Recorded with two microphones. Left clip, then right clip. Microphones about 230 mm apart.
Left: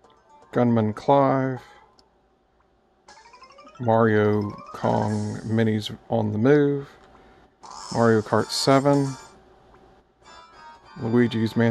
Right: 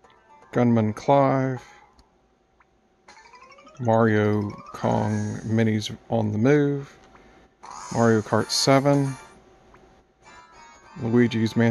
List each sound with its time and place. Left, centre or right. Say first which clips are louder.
0.1 s speech: left 1 dB; centre
3.1 s music: even; centre
3.8 s speech: left 1 dB; centre
7.6 s a sound: right 1 dB; centre
7.9 s speech: left 1 dB; centre
11.0 s speech: even; centre